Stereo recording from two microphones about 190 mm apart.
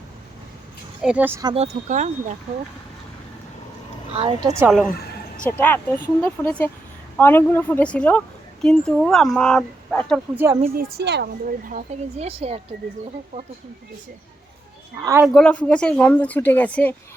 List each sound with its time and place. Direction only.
1.0 s speech: 10° right (ahead or behind)
1.5 s speech: 35° right (ahead or behind)
4.2 s a woman's voice: 25° right (ahead or behind)
5.5 s speech: 10° left (ahead or behind)
10.3 s speech: 15° right (ahead or behind)
10.8 s speech: 60° right (ahead or behind)
11.7 s speech: 40° right (ahead or behind)
15.2 s speech: centre (ahead or behind)